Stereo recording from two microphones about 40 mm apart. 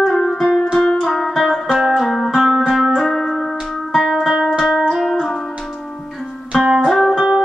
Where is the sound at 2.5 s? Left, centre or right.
Centre.